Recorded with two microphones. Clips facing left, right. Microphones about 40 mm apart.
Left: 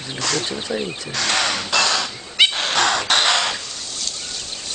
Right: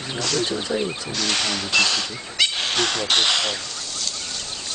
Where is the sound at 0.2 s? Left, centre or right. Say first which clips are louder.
Left 1 dB; left.